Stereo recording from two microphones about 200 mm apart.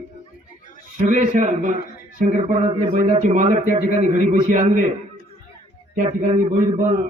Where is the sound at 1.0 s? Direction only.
40° right (ahead or behind).